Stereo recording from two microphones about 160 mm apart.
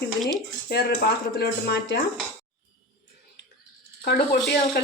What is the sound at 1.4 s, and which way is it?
Speech, 90° left.